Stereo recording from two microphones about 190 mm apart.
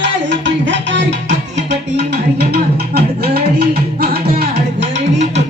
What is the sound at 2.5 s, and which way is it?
Music, 55° right (ahead or behind).